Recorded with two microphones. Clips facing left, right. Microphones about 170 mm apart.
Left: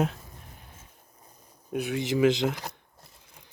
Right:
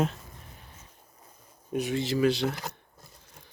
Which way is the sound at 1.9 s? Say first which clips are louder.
Left 3 dB; 20° left (ahead or behind).